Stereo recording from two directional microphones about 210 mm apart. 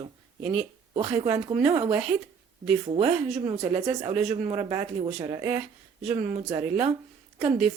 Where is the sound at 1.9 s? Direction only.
5° right (ahead or behind).